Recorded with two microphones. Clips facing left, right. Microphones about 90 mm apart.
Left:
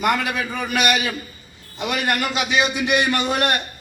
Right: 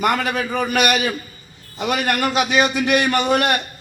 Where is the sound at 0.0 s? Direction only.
45° right (ahead or behind).